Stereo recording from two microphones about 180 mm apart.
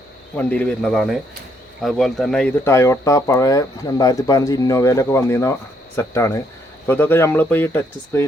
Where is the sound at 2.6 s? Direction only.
15° left (ahead or behind).